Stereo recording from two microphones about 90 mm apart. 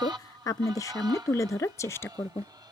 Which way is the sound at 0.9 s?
45° right (ahead or behind).